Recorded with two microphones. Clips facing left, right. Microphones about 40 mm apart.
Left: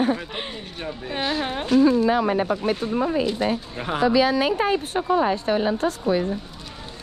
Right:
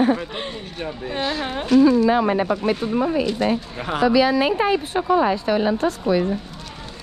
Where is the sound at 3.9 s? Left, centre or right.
Right.